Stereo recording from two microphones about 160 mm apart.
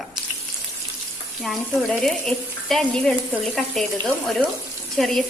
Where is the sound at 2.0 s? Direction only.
Centre (ahead or behind).